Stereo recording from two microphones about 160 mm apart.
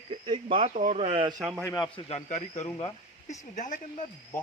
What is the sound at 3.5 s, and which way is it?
Speech, 50° left (ahead or behind).